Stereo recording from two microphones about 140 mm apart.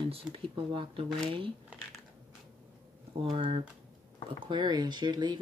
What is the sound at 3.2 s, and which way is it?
Speech, 40° right (ahead or behind).